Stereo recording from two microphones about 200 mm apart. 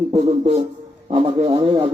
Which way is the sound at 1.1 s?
25° right (ahead or behind).